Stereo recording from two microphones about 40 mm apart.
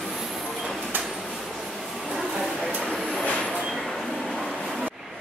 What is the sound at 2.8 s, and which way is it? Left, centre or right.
Vehicle, centre.